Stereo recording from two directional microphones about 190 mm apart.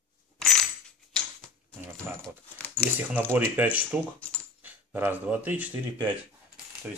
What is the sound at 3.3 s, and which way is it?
Speech, 10° right (ahead or behind).